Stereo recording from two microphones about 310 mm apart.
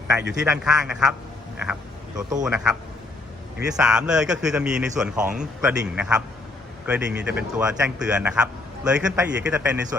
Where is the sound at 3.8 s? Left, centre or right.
Centre.